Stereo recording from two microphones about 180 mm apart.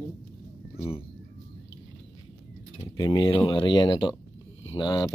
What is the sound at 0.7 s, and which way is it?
Speech, 35° left (ahead or behind).